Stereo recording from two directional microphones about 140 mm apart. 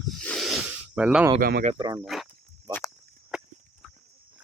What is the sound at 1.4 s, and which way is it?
Speech, 90° right.